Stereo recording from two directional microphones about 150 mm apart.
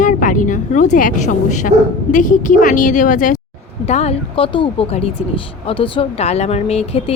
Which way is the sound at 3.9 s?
45° left (ahead or behind).